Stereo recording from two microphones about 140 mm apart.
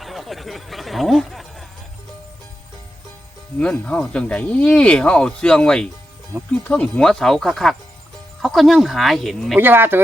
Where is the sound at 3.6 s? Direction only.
5° left (ahead or behind).